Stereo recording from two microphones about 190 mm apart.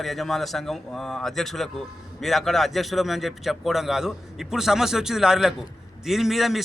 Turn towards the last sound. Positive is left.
turn(degrees=0)  # may be behind; listen again after turning